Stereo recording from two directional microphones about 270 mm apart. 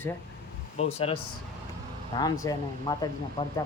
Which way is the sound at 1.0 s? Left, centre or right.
Left.